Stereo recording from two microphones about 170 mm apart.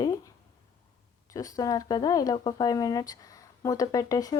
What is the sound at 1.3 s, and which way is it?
Speech, 20° left (ahead or behind).